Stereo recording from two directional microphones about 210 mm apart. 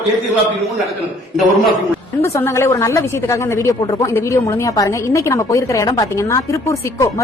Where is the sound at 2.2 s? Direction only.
15° left (ahead or behind).